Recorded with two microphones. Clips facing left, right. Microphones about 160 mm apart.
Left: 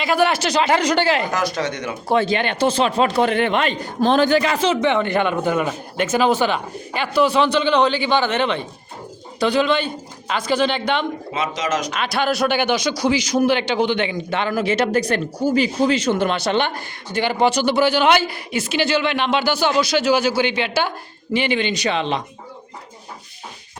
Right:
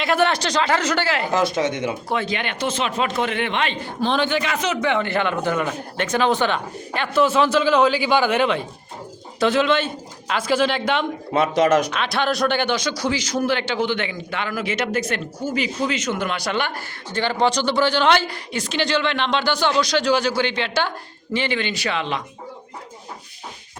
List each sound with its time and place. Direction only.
0.0 s speech: centre (ahead or behind); by 1.3 s 20° left (ahead or behind)
1.3 s speech: 25° right (ahead or behind)
2.0 s speech: 30° left (ahead or behind); by 11.0 s centre (ahead or behind)
11.3 s speech: 55° right (ahead or behind)
11.9 s speech: 5° left (ahead or behind); by 16.8 s 25° left (ahead or behind)
17.1 s speech: 10° left (ahead or behind)